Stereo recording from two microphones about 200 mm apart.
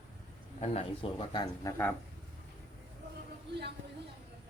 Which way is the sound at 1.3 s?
20° left (ahead or behind).